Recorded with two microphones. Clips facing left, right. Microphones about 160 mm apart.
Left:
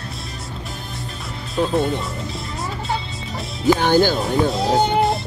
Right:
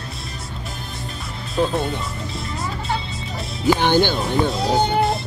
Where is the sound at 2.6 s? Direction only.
Centre (ahead or behind).